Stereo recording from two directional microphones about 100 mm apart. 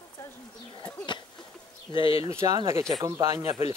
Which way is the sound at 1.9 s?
60° left (ahead or behind).